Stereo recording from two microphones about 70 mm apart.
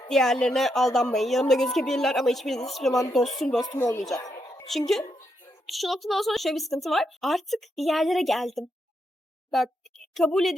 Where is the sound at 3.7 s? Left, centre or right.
Left.